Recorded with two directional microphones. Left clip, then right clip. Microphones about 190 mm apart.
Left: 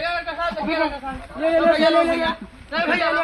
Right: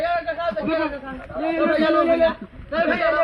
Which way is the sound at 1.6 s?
15° left (ahead or behind).